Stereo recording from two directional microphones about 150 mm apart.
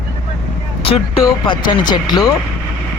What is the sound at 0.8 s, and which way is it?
Vehicle, 40° left (ahead or behind).